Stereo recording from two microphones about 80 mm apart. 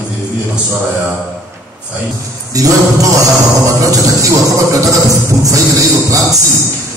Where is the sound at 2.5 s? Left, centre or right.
Right.